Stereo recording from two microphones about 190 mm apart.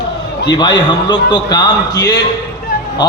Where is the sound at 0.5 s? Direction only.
20° left (ahead or behind).